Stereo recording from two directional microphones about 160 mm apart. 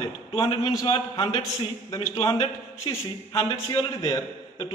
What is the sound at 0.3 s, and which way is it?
A man's voice, 35° left (ahead or behind).